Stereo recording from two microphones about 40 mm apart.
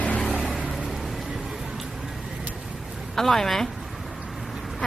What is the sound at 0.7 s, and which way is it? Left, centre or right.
Music, centre.